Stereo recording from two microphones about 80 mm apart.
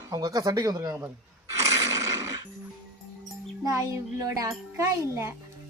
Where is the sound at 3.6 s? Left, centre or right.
Right.